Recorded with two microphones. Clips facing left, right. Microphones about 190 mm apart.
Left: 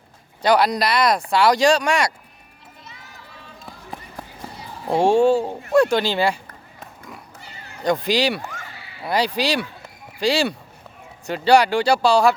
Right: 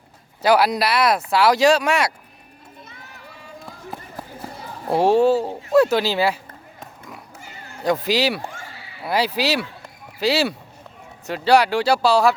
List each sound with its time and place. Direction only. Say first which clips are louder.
0.4 s speech: even; 5° right (ahead or behind)
4.9 s speech: even; 5° right (ahead or behind)
7.8 s speech: even; 5° right (ahead or behind)
8.4 s a sound: right 1 dB; 30° right (ahead or behind)
9.0 s speech: even; 5° right (ahead or behind)